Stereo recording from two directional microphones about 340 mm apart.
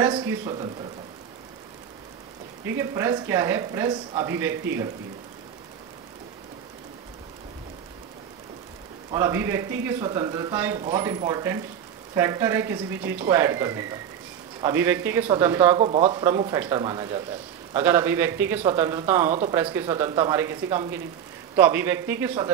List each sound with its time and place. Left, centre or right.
0.0 s a man's voice: centre
2.8 s speech: centre
9.1 s speech: centre